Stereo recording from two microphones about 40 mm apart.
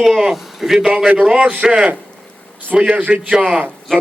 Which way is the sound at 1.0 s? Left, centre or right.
Centre.